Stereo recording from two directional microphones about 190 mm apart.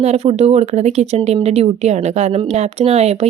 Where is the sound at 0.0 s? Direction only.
35° right (ahead or behind).